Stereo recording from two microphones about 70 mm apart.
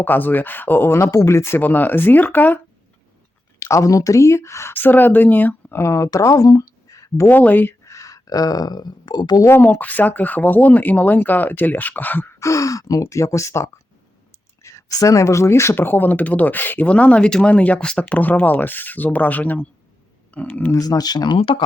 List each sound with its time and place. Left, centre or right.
0.0 s speech: left
1.5 s speech: left
3.6 s speech: left
4.7 s speech: left
5.8 s speech: left
7.3 s speech: left
7.9 s speech: left
9.5 s speech: left
12.4 s speech: left
14.6 s speech: left; by 18.0 s centre
18.1 s speech: left
20.7 s speech: left